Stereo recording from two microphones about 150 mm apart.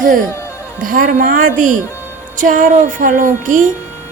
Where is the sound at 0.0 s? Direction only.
60° right (ahead or behind).